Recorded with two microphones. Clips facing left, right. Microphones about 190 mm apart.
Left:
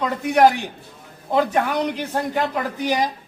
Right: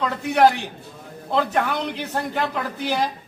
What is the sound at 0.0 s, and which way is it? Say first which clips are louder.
A woman's voice: left 1 dB; 10° left (ahead or behind).